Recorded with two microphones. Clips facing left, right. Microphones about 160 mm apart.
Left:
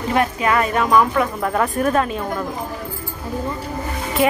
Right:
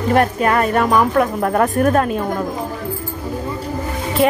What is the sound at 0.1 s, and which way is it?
Speech, 45° right (ahead or behind).